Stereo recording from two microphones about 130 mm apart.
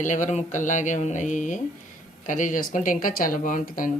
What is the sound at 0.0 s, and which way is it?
Speech, 75° left (ahead or behind).